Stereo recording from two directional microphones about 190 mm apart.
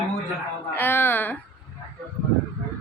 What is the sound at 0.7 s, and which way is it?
Speech, 10° left (ahead or behind).